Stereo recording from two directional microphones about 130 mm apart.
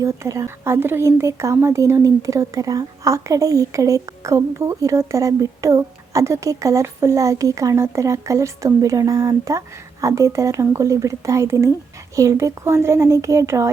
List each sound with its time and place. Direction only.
0.0 s speech: 25° right (ahead or behind)